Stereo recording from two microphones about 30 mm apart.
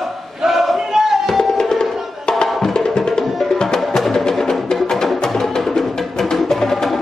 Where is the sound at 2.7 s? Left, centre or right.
Left.